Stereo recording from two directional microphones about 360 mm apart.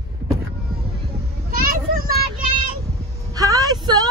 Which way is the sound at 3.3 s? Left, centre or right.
Centre.